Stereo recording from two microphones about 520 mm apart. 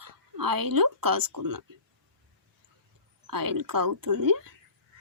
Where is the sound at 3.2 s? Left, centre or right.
Right.